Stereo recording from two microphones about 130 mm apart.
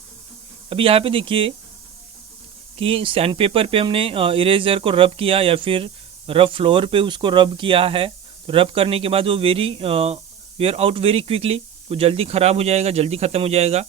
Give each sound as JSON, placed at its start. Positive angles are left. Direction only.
{"t": 0.7, "sound": "speech", "side_deg": -45}
{"t": 2.7, "sound": "speech", "side_deg": -45}